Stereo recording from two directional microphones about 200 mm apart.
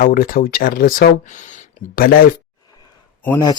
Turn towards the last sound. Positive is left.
turn(degrees=20)  # may be behind; listen again after turning